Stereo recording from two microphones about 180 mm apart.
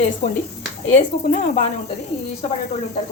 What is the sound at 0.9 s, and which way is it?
Speech, 40° left (ahead or behind).